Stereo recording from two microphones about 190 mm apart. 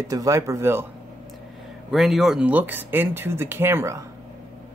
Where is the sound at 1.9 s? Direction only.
Centre (ahead or behind).